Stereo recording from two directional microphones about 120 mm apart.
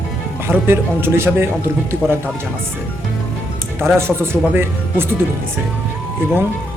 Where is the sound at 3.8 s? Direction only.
20° right (ahead or behind).